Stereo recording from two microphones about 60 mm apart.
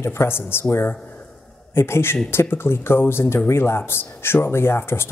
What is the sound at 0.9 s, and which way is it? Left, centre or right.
Speech, left.